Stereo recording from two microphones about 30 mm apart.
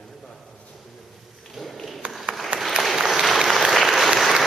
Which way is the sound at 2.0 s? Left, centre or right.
Right.